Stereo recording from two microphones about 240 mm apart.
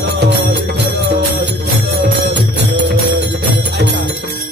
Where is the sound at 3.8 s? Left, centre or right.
Right.